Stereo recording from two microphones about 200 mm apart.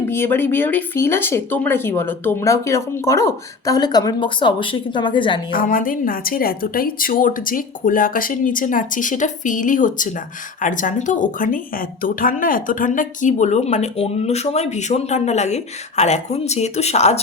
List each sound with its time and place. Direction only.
0.1 s speech: 10° left (ahead or behind)
5.5 s a woman's voice: 45° left (ahead or behind)